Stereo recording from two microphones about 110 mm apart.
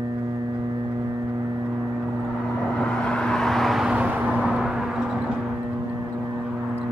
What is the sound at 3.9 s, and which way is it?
Vehicle, 15° right (ahead or behind).